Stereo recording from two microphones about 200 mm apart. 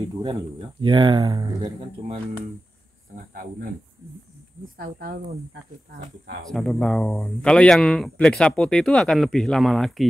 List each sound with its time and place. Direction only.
0.2 s speech: 20° right (ahead or behind)
4.7 s speech: 50° right (ahead or behind)
6.4 s speech: centre (ahead or behind)